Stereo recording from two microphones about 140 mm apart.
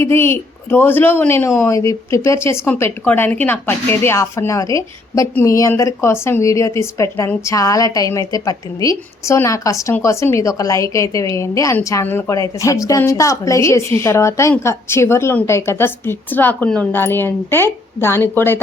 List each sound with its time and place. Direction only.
0.0 s a woman's voice: 15° left (ahead or behind)